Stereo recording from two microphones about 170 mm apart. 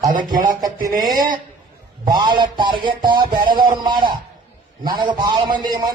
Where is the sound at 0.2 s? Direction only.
25° right (ahead or behind).